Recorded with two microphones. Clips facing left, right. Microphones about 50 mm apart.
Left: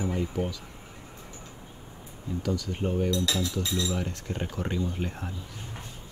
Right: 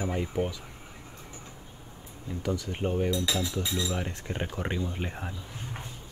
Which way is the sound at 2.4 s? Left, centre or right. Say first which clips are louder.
Even; right.